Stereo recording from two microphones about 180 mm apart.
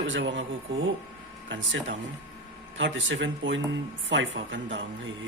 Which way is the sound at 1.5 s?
90° right.